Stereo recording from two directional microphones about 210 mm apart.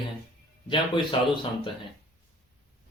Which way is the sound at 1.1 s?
25° left (ahead or behind).